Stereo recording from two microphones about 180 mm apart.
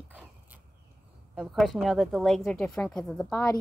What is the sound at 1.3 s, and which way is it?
Speech, centre (ahead or behind).